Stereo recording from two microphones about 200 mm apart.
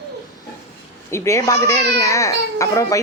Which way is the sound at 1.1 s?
15° left (ahead or behind).